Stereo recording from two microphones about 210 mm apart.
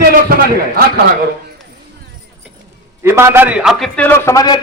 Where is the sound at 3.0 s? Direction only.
10° right (ahead or behind); by 4.6 s 15° left (ahead or behind).